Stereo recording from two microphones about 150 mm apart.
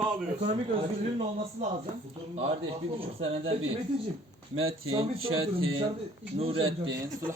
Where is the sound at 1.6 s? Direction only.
40° right (ahead or behind).